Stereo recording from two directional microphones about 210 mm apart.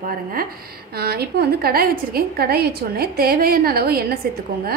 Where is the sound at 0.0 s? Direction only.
40° right (ahead or behind).